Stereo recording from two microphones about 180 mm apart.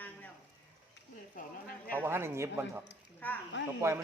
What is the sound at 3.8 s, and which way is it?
Speech, 15° right (ahead or behind).